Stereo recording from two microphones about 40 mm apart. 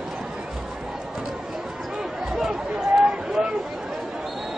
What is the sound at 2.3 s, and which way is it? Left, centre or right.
Chatter, centre.